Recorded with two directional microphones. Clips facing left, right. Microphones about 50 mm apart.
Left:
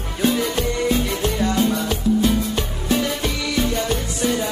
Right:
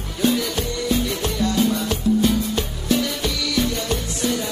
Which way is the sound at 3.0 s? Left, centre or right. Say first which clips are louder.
Left 1 dB; left.